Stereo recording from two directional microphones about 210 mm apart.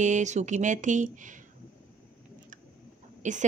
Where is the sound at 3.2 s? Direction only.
35° right (ahead or behind).